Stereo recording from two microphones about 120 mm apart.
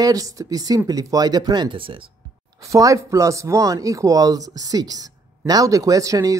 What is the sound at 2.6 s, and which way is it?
Speech, 25° right (ahead or behind).